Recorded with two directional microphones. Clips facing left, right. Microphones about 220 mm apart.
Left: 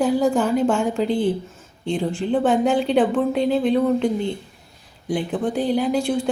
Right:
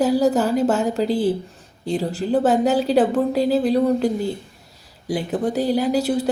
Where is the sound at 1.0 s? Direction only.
35° right (ahead or behind).